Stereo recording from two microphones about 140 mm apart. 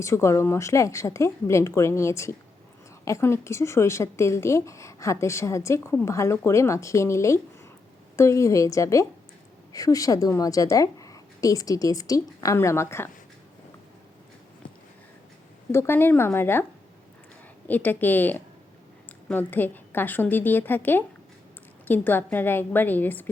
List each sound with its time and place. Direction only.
0.0 s a woman's voice: 20° left (ahead or behind)
15.7 s a woman's voice: 15° left (ahead or behind)
17.7 s a woman's voice: 10° left (ahead or behind)